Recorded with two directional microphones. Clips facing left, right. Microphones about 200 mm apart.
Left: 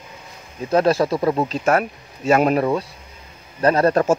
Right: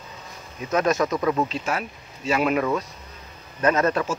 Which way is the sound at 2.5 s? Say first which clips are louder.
Left 4 dB; 30° left (ahead or behind).